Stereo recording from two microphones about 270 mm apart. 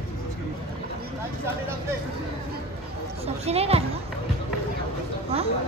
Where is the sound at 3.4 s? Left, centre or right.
Right.